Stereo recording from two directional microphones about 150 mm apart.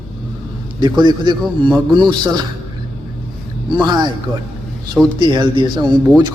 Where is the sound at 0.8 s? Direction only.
30° right (ahead or behind).